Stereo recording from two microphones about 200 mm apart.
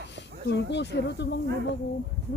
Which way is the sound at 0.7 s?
60° left (ahead or behind).